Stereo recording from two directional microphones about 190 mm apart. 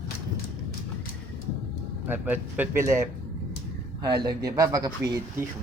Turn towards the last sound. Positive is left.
turn(degrees=-20)  # may be behind; listen again after turning